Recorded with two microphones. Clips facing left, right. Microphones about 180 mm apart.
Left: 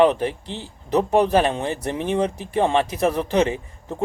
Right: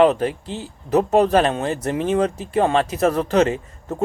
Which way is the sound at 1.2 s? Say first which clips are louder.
Right 2 dB; 15° left (ahead or behind).